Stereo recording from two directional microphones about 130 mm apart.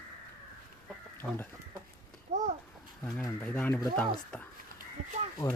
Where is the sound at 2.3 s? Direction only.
60° right (ahead or behind).